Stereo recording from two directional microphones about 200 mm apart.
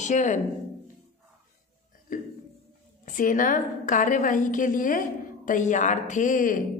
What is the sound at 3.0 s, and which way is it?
A woman's voice, 40° left (ahead or behind).